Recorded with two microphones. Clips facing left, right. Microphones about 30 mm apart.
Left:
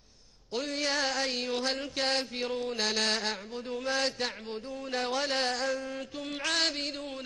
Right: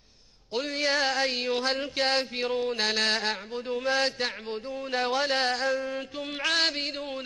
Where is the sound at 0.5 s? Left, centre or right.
Centre.